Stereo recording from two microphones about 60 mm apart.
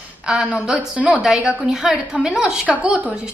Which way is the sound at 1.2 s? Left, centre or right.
Centre.